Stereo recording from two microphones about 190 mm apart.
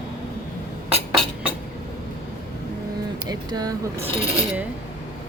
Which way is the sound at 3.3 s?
20° right (ahead or behind).